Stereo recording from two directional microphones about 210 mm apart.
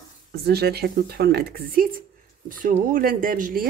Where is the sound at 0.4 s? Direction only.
50° right (ahead or behind).